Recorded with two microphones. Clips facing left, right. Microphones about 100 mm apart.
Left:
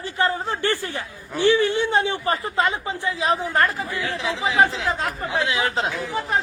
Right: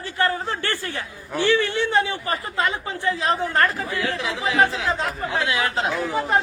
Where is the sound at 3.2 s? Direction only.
10° left (ahead or behind).